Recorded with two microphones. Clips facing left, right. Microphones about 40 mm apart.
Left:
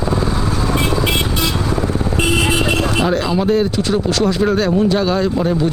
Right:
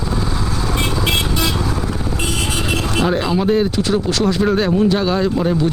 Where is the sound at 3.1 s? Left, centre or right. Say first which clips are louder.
Left 1 dB; centre.